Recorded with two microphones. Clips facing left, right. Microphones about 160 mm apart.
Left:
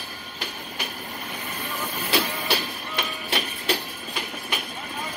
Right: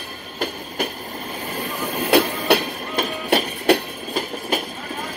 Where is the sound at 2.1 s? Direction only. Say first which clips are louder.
Right 9 dB; 55° right (ahead or behind).